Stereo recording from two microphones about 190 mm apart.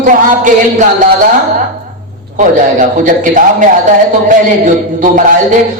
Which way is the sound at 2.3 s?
40° right (ahead or behind).